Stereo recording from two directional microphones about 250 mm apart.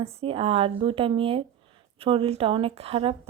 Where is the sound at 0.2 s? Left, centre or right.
Right.